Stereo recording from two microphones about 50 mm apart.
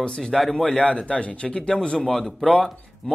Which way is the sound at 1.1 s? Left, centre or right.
Left.